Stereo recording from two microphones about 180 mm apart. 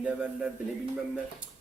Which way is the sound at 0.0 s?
5° right (ahead or behind).